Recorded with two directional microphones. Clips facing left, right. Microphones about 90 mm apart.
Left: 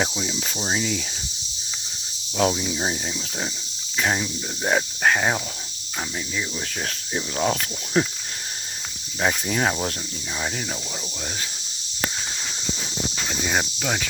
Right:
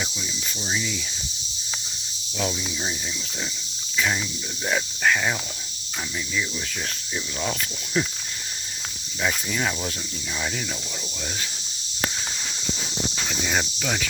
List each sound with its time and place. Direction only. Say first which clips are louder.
0.0 s cricket: left 7 dB; 70° left (ahead or behind); by 1.0 s 55° left (ahead or behind)
2.4 s speech: left 6 dB; 50° left (ahead or behind)
3.9 s speech: left 2 dB; 45° left (ahead or behind)
7.1 s speech: left 6 dB; 50° left (ahead or behind)
9.2 s speech: left 3 dB; 45° left (ahead or behind)
13.4 s cricket: left 2 dB; 15° left (ahead or behind)